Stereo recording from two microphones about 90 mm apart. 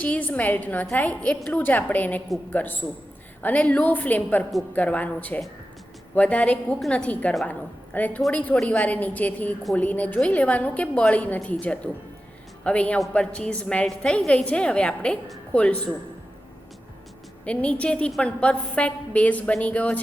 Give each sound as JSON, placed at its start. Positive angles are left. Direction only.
{"t": 0.0, "sound": "a woman's voice", "side_deg": 15}
{"t": 17.4, "sound": "a woman's voice", "side_deg": 15}